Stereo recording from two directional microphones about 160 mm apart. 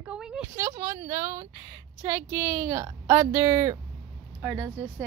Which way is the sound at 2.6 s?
30° right (ahead or behind).